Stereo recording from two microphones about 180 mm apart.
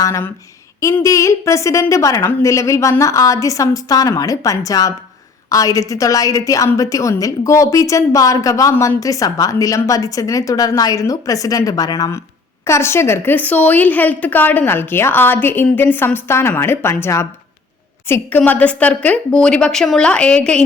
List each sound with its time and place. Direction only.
0.0 s a woman's voice: 15° left (ahead or behind)